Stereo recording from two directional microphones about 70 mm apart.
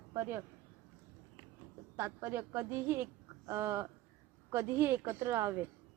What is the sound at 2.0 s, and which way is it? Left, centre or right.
A woman's voice, right.